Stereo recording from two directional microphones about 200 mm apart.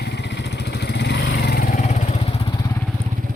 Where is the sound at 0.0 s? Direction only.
60° left (ahead or behind); by 2.1 s 40° left (ahead or behind).